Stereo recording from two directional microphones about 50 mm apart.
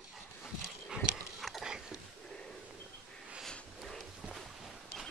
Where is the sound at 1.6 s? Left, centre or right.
Centre.